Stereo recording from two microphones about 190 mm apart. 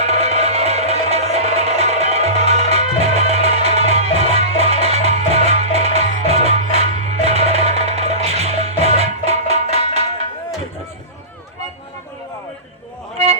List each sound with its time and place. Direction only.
0.0 s music: 35° right (ahead or behind)